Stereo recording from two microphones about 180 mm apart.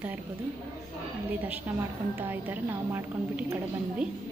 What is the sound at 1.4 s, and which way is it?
A woman's voice, 10° right (ahead or behind).